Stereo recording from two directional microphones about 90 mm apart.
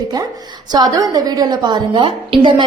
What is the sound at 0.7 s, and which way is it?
A woman's voice, 45° right (ahead or behind).